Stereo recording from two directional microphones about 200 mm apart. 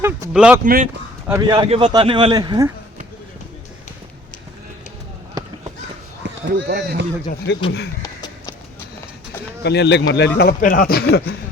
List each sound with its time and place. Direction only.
0.0 s speech: 10° right (ahead or behind)
0.6 s speech: 40° right (ahead or behind)
1.3 s speech: 20° right (ahead or behind)
6.4 s speech: 55° right (ahead or behind)
7.5 s a man's voice: 60° left (ahead or behind)
8.0 s clip-clop: 20° left (ahead or behind)
9.6 s a man's voice: 55° left (ahead or behind)